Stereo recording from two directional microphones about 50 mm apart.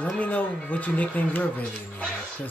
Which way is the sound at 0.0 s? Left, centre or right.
Left.